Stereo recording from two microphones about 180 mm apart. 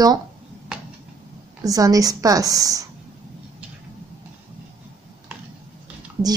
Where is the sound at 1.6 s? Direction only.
20° right (ahead or behind).